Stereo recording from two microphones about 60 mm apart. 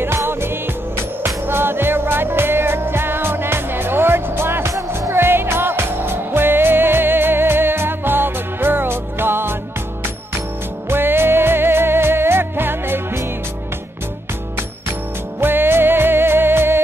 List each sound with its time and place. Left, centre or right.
0.0 s music: right
4.7 s music: right
5.1 s music: right
10.9 s music: right
15.4 s music: right